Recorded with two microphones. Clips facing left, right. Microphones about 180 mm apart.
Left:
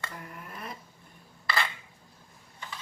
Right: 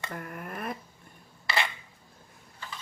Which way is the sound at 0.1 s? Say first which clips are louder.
Right 6 dB; 55° right (ahead or behind).